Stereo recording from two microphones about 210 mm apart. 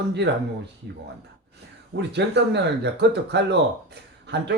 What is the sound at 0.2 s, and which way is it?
Speech, 55° right (ahead or behind).